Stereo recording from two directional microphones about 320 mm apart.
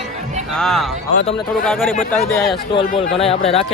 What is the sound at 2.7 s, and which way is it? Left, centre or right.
Speech, centre.